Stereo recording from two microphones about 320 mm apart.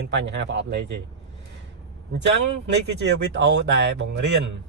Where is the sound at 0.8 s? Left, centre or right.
Right.